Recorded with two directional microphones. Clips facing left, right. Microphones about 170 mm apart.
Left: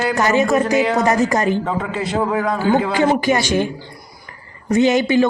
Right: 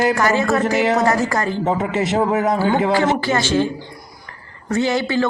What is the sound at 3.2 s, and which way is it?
Speech, 15° left (ahead or behind).